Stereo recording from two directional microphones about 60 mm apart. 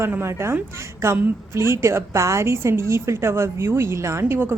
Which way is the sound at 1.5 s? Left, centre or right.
Right.